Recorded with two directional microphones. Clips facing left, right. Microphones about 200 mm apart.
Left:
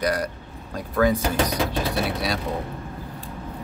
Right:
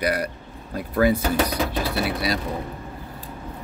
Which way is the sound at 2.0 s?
Centre (ahead or behind).